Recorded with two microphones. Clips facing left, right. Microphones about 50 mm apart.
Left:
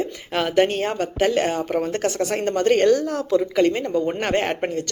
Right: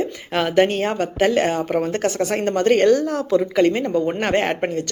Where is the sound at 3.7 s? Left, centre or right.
Right.